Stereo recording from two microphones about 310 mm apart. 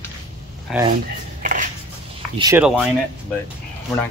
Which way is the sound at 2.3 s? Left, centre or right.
Centre.